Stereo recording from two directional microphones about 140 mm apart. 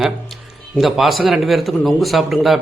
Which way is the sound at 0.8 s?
Centre (ahead or behind).